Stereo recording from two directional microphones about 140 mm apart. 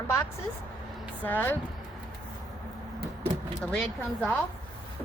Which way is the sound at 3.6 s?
5° left (ahead or behind).